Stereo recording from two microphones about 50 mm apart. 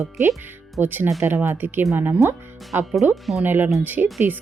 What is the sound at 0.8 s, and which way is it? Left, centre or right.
Speech, right.